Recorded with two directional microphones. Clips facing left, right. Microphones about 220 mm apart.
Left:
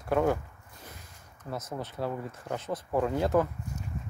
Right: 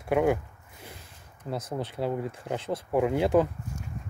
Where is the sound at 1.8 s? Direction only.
20° right (ahead or behind).